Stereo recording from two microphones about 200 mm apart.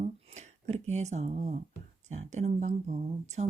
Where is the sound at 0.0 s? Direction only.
35° right (ahead or behind).